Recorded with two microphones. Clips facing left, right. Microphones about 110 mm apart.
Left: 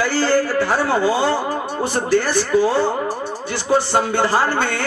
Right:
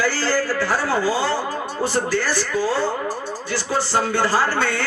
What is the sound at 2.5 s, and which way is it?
Speech, 20° left (ahead or behind).